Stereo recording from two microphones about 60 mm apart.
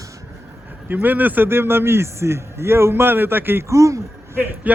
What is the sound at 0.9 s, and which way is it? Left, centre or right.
Speech, right.